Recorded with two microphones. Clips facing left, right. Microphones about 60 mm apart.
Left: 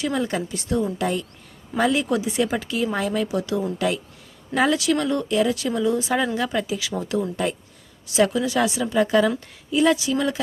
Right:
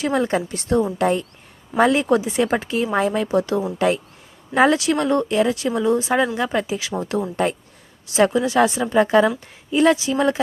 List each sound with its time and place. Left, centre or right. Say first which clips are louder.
0.0 s speech: right 4 dB; right
6.1 s speech: right 3 dB; right
7.4 s speech: right 7 dB; right
8.1 s speech: right 3 dB; right